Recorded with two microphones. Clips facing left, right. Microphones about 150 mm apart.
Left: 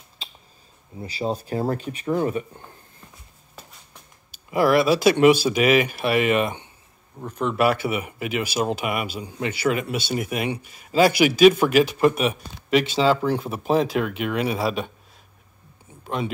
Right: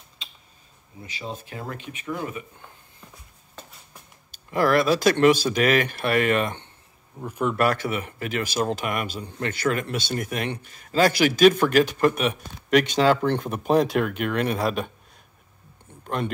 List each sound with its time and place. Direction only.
1.0 s speech: 35° left (ahead or behind)
4.5 s speech: 10° left (ahead or behind)
7.2 s speech: 10° right (ahead or behind)
7.5 s speech: 10° left (ahead or behind)
15.9 s a sound: 5° left (ahead or behind)